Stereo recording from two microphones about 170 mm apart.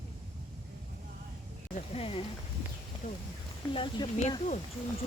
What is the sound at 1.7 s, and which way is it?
Speech, 35° left (ahead or behind).